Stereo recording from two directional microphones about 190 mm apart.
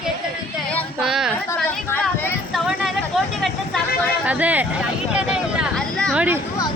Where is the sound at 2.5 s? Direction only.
Centre (ahead or behind).